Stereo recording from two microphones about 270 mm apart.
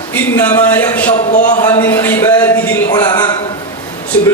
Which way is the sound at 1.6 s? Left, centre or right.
Centre.